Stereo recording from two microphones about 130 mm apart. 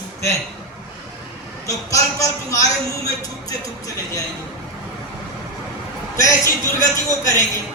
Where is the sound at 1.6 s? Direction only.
25° left (ahead or behind).